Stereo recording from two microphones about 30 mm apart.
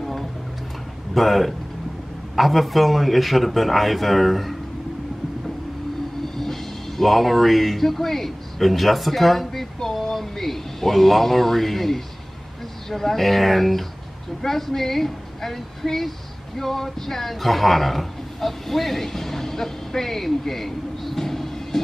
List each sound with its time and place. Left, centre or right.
0.0 s music: centre
1.1 s a man's voice: centre
6.3 s a man's voice: centre